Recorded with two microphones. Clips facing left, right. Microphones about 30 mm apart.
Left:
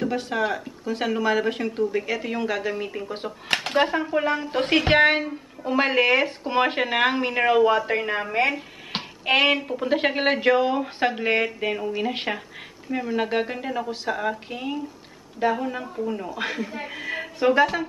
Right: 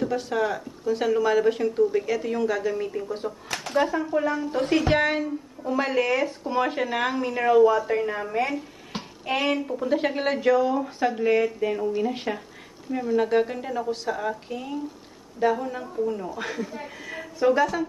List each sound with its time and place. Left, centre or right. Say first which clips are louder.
0.3 s speech: even; left
1.8 s speech: right 1 dB; left
2.0 s speech: right 1 dB; left
3.4 s speech: left 3 dB; left
9.7 s speech: left 2 dB; left
12.9 s speech: right 2 dB; left
16.3 s speech: left 2 dB; left